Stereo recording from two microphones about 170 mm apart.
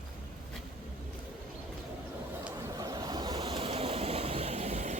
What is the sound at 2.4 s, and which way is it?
Vehicle, 20° right (ahead or behind).